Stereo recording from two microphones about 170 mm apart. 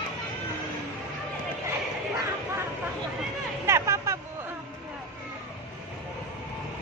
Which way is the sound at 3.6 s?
15° right (ahead or behind).